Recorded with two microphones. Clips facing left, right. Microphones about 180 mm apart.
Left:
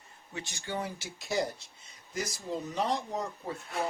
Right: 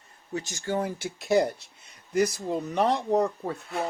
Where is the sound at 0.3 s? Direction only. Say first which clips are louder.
Right 8 dB; 40° right (ahead or behind).